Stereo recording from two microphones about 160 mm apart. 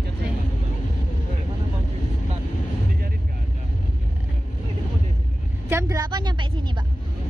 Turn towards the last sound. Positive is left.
turn(degrees=-30)  # may be behind; listen again after turning